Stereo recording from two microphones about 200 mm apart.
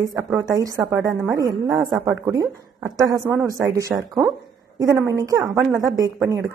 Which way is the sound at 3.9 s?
5° right (ahead or behind).